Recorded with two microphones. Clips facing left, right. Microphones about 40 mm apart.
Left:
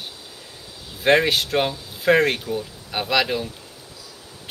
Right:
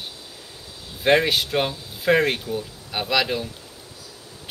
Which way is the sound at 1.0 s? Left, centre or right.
Centre.